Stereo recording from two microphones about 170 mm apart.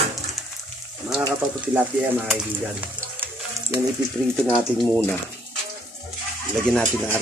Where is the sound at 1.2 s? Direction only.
10° right (ahead or behind).